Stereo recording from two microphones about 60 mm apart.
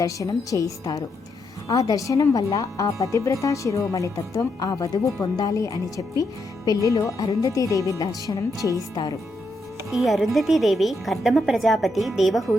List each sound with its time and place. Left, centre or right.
0.0 s speech: left
8.6 s speech: left
9.9 s a woman's voice: centre